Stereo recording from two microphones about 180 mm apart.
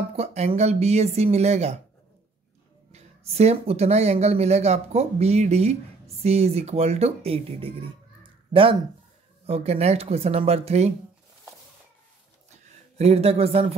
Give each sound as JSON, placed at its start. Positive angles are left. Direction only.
{"t": 0.1, "sound": "speech", "side_deg": -35}
{"t": 2.9, "sound": "speech", "side_deg": -35}
{"t": 8.2, "sound": "a sound", "side_deg": -30}
{"t": 9.5, "sound": "speech", "side_deg": -35}
{"t": 12.9, "sound": "speech", "side_deg": -35}